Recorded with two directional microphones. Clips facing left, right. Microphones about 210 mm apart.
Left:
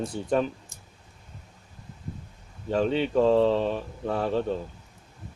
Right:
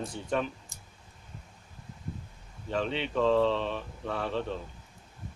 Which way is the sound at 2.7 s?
40° left (ahead or behind).